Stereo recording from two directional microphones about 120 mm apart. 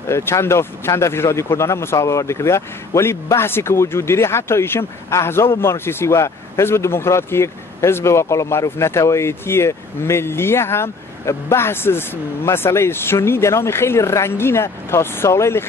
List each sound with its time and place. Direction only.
0.0 s speech: 20° left (ahead or behind)